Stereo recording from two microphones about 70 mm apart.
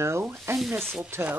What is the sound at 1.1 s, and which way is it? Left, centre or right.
Chopping, right.